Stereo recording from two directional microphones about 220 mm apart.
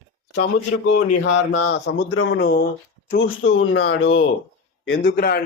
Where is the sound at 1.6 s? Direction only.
50° left (ahead or behind).